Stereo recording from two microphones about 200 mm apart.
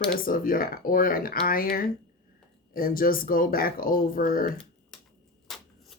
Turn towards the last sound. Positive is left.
turn(degrees=0)  # may be behind; listen again after turning